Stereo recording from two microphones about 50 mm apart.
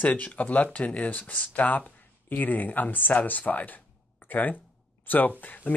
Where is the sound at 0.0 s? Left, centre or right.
Left.